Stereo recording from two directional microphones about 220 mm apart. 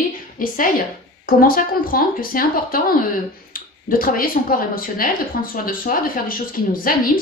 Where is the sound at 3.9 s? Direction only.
40° left (ahead or behind).